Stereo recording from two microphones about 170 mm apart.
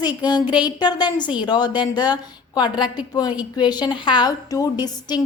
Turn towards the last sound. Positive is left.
turn(degrees=25)  # may be behind; listen again after turning